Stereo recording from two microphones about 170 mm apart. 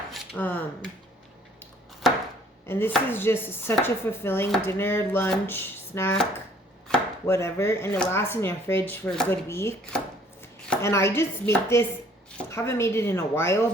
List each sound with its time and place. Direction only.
0.1 s speech: 10° left (ahead or behind)
2.6 s chopping: 15° left (ahead or behind)
6.8 s chopping: 5° left (ahead or behind)
7.3 s chopping: 15° left (ahead or behind)